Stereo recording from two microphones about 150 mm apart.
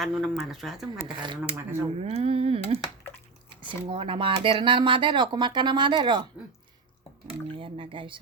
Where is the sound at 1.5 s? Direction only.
45° right (ahead or behind).